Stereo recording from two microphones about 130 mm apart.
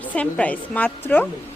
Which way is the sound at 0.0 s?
10° left (ahead or behind).